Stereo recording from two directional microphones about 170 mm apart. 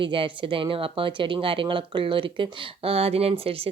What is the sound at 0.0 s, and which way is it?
Speech, 30° right (ahead or behind).